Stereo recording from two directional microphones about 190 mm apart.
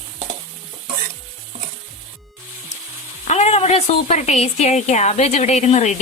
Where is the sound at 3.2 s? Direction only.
35° left (ahead or behind).